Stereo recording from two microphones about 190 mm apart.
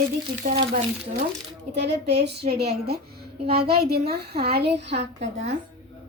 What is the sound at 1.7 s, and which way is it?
A child's voice, 60° right (ahead or behind).